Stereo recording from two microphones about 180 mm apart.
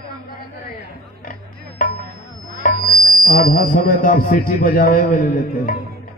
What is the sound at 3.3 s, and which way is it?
A man's voice, 55° left (ahead or behind).